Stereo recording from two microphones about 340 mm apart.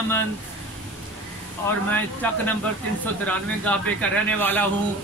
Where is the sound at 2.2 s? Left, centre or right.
Centre.